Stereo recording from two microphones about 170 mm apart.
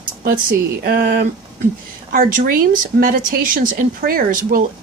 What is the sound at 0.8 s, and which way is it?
Speech, 60° right (ahead or behind).